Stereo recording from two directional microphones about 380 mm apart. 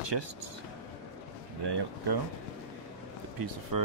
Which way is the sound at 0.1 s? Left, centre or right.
Right.